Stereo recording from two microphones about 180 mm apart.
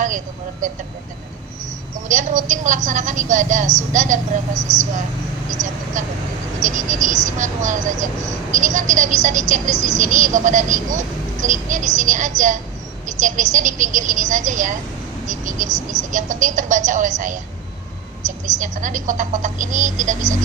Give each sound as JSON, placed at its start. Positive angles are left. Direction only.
{"t": 2.0, "sound": "speech", "side_deg": -45}